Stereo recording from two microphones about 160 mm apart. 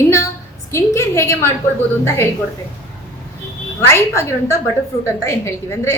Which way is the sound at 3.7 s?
20° left (ahead or behind).